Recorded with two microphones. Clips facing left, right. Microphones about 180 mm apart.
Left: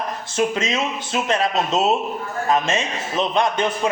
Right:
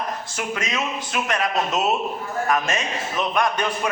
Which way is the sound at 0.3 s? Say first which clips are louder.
Left 7 dB; 25° left (ahead or behind).